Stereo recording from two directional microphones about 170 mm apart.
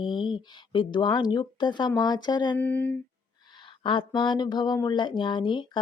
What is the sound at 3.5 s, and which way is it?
Speech, 30° left (ahead or behind).